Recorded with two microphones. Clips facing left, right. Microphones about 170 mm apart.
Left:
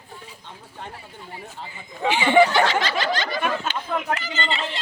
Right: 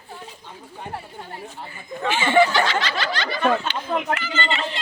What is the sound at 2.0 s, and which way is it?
Speech, 15° left (ahead or behind).